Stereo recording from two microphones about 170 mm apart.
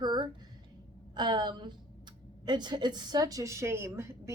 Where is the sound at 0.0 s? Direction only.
25° right (ahead or behind).